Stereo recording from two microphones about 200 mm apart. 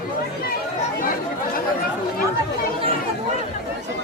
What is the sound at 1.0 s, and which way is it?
Chatter, 45° left (ahead or behind).